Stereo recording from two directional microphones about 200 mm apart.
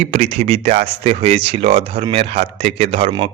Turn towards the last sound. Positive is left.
turn(degrees=-30)  # may be behind; listen again after turning